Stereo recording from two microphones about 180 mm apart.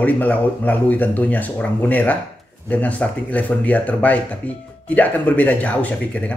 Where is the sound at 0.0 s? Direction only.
10° left (ahead or behind).